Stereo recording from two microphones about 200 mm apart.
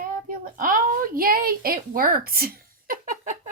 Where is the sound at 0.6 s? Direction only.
40° right (ahead or behind).